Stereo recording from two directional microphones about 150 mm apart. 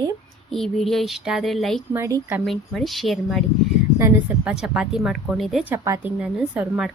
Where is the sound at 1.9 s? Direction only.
20° right (ahead or behind).